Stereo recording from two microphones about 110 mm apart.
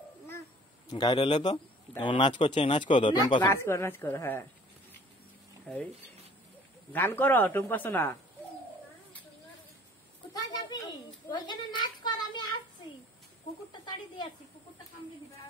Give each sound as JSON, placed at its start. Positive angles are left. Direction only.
{"t": 0.8, "sound": "speech", "side_deg": 40}
{"t": 3.4, "sound": "speech", "side_deg": 25}
{"t": 5.7, "sound": "speech", "side_deg": 10}
{"t": 6.9, "sound": "speech", "side_deg": 20}
{"t": 10.3, "sound": "a sound", "side_deg": 40}
{"t": 13.7, "sound": "speech", "side_deg": 45}